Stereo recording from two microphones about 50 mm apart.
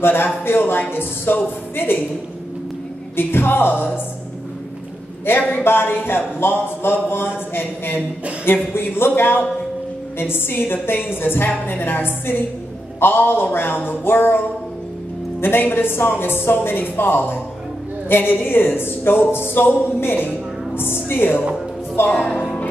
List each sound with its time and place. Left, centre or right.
0.0 s speech: left
3.2 s speech: left
5.3 s speech: left
15.4 s speech: left
22.1 s speech: left